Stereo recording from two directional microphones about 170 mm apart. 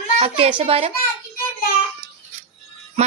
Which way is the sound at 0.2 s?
35° right (ahead or behind).